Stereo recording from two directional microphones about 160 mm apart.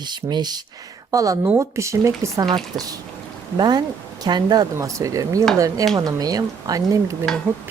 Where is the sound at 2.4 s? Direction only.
30° right (ahead or behind).